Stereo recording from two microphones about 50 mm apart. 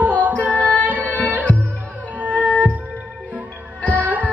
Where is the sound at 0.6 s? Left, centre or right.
Left.